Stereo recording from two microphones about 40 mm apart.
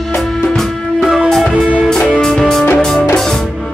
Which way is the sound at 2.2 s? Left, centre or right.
Centre.